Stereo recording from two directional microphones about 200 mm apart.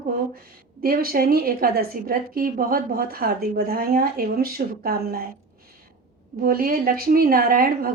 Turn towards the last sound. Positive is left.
turn(degrees=-45)  # may be behind; listen again after turning